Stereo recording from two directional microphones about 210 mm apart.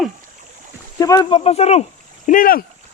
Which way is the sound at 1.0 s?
15° left (ahead or behind).